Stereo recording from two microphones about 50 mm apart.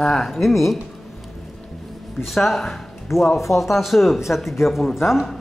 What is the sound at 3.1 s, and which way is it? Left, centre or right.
Speech, left.